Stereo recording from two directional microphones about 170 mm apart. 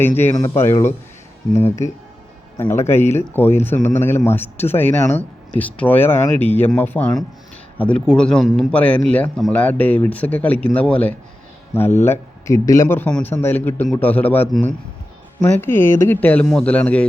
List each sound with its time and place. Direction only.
0.3 s a man's voice: 15° left (ahead or behind)